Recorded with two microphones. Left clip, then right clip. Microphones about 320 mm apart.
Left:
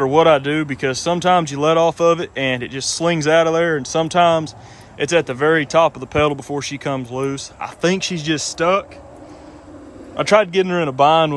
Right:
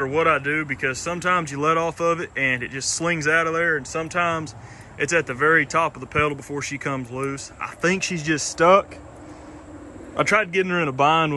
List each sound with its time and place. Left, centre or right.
0.0 s speech: centre
10.1 s a man's voice: centre
10.4 s a man's voice: left
10.7 s a man's voice: centre